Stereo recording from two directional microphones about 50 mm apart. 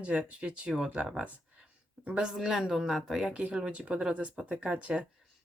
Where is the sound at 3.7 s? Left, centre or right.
Right.